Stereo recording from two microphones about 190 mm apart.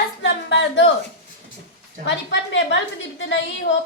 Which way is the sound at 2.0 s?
70° left (ahead or behind).